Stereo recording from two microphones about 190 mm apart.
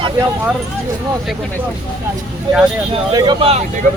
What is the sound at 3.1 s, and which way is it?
Speech, 25° right (ahead or behind).